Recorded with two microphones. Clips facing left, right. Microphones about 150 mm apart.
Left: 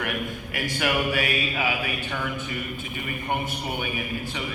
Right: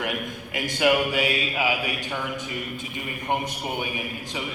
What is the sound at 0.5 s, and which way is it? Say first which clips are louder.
A man's voice: right 5 dB; 20° right (ahead or behind).